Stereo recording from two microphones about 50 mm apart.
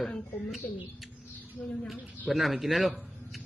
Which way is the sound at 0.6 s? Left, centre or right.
Left.